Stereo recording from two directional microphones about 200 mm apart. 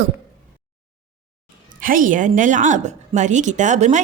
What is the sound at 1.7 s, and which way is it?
A woman's voice, 45° right (ahead or behind).